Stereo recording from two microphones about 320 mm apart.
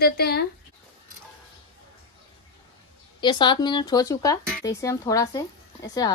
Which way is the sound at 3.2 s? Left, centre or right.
Centre.